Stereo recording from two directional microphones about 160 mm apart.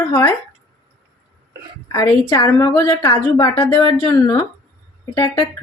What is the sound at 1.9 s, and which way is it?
A woman's voice, 20° left (ahead or behind).